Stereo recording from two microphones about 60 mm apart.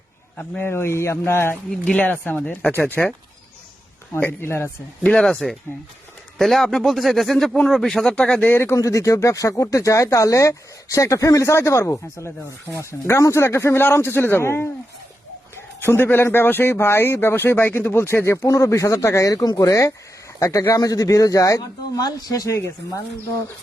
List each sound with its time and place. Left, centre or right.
0.6 s speech: left
1.8 s speech: left; by 3.1 s centre
4.1 s a man's voice: left
5.0 s speech: centre
8.4 s a man's voice: left
8.7 s speech: left
13.9 s a man's voice: left
18.4 s speech: left
20.7 s speech: left
22.5 s speech: left